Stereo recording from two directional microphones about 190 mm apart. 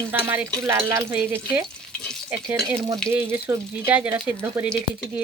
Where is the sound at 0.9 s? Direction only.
15° right (ahead or behind).